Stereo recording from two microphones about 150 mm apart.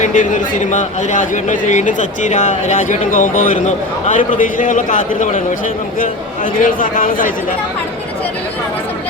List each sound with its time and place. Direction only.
0.0 s a man's voice: 55° left (ahead or behind)